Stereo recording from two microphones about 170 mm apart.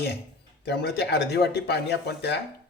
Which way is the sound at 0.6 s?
75° left (ahead or behind).